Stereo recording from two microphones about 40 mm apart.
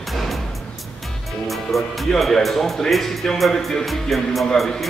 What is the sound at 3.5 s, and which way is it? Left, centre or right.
Speech, centre.